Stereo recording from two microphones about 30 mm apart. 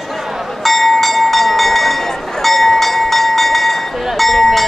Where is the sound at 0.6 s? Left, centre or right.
Centre.